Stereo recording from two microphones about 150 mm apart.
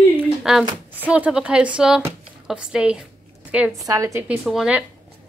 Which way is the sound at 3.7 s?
20° right (ahead or behind).